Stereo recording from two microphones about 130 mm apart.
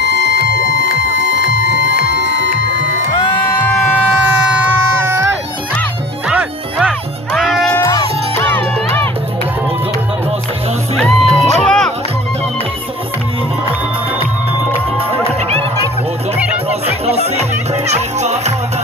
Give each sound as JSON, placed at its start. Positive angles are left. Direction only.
{"t": 3.2, "sound": "music", "side_deg": 35}
{"t": 5.0, "sound": "music", "side_deg": -20}
{"t": 7.7, "sound": "music", "side_deg": 25}
{"t": 11.0, "sound": "music", "side_deg": 5}
{"t": 15.0, "sound": "music", "side_deg": -45}
{"t": 16.3, "sound": "music", "side_deg": -10}
{"t": 16.8, "sound": "music", "side_deg": -50}